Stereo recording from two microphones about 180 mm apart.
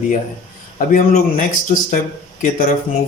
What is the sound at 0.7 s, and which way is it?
Speech, 45° left (ahead or behind).